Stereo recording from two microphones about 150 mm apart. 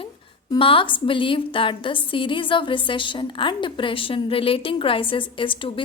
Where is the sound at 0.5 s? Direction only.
35° left (ahead or behind).